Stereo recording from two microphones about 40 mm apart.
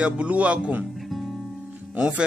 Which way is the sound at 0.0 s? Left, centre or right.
Right.